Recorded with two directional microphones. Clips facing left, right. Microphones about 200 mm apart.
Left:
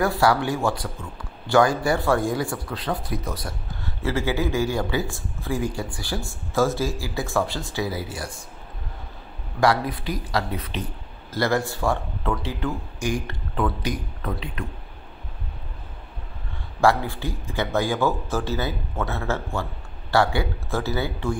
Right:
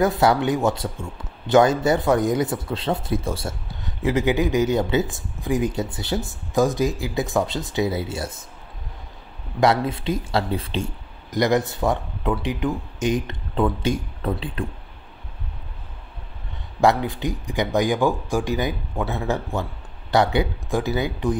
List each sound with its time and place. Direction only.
0.0 s speech: 20° right (ahead or behind)
9.6 s speech: 25° right (ahead or behind)
11.2 s speech: 20° right (ahead or behind)
16.8 s speech: 20° right (ahead or behind)